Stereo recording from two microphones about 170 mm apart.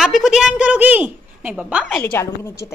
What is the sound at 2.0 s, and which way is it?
Speech, 15° left (ahead or behind).